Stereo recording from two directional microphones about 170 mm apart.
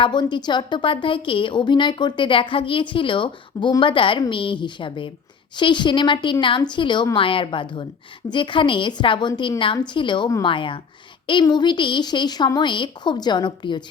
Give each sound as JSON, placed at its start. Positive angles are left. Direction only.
{"t": 0.0, "sound": "a woman's voice", "side_deg": 25}